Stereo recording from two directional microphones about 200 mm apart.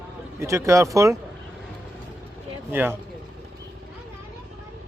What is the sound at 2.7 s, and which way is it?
Speech, 10° right (ahead or behind).